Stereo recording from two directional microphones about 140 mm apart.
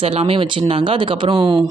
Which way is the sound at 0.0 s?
45° right (ahead or behind).